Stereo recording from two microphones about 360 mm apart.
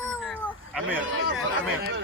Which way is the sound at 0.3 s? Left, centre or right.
Centre.